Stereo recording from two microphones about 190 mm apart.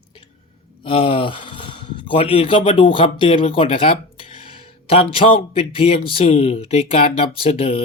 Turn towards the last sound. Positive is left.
turn(degrees=30)  # may be behind; listen again after turning